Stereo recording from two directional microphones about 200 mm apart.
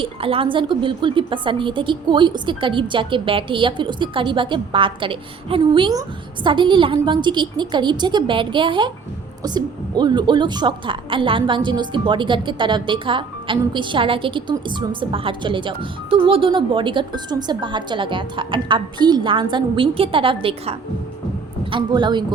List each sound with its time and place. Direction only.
0.0 s a woman's voice: 25° right (ahead or behind)